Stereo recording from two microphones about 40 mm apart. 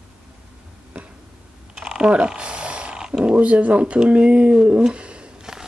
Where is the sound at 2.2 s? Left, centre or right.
Right.